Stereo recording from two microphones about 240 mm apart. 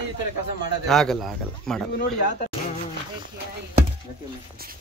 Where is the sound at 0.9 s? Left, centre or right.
Centre.